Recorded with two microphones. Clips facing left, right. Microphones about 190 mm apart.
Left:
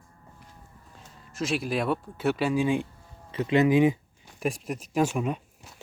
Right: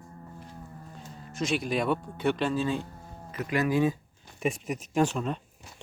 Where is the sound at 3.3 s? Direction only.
25° left (ahead or behind).